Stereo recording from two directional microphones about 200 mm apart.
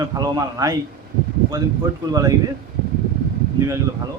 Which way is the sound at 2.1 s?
15° right (ahead or behind).